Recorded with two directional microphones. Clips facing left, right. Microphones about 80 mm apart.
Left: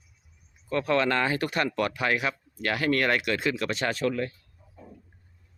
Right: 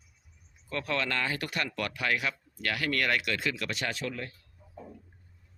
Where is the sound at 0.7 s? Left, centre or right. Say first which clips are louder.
Left 7 dB; left.